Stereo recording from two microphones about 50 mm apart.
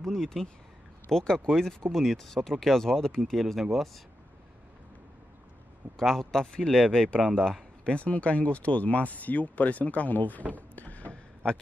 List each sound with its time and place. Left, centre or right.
0.0 s speech: centre
5.9 s speech: centre
7.8 s speech: left
10.5 s a sound: left